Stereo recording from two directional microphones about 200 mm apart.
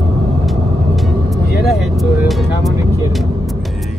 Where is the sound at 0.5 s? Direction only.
Centre (ahead or behind).